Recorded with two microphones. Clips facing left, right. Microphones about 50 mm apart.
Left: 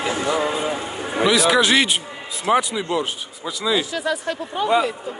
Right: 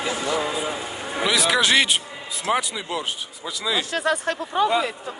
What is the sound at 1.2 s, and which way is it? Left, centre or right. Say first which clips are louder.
Speech: left 4 dB; centre.